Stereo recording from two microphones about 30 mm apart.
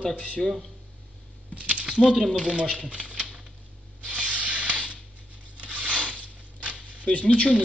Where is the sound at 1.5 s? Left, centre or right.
Right.